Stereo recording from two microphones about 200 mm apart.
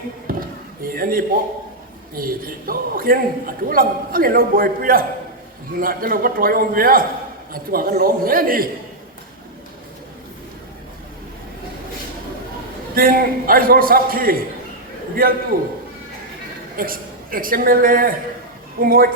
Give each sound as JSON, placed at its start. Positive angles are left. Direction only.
{"t": 0.3, "sound": "a sound", "side_deg": -45}
{"t": 2.1, "sound": "a man's voice", "side_deg": -45}
{"t": 12.9, "sound": "a man's voice", "side_deg": -45}
{"t": 16.7, "sound": "a man's voice", "side_deg": -45}